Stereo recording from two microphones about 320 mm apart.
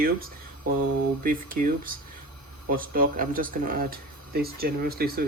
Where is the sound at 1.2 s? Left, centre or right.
Right.